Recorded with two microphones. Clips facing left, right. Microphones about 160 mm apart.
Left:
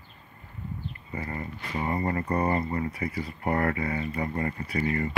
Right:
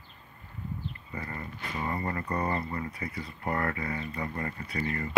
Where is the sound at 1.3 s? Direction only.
20° left (ahead or behind).